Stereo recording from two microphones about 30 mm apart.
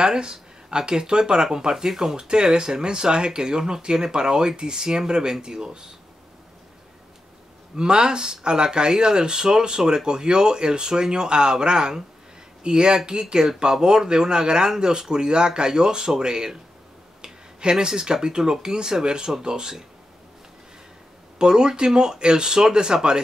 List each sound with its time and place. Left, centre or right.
0.0 s speech: right
2.1 s speech: right
7.7 s speech: right
21.4 s speech: right